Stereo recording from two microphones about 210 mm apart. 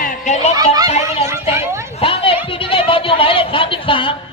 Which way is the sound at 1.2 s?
15° right (ahead or behind).